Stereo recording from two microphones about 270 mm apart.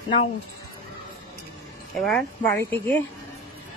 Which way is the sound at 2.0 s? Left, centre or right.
Centre.